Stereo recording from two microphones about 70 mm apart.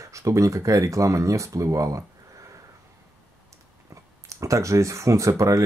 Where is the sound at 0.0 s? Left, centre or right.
Right.